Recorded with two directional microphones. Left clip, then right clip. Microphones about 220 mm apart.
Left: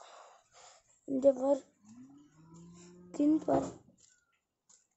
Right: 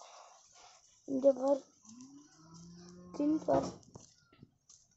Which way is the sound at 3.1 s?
25° left (ahead or behind).